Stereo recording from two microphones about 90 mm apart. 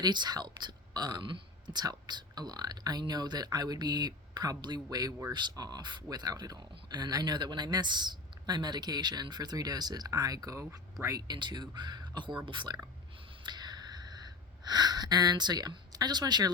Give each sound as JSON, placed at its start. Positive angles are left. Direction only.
{"t": 0.0, "sound": "speech", "side_deg": -55}
{"t": 11.3, "sound": "speech", "side_deg": -55}
{"t": 13.4, "sound": "a sound", "side_deg": -55}
{"t": 14.6, "sound": "speech", "side_deg": -50}